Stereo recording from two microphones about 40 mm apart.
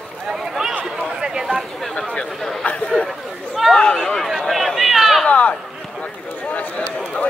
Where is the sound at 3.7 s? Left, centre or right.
Left.